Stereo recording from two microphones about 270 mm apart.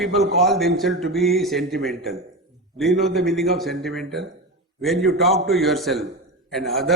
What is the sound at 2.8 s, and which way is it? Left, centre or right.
A man's voice, centre.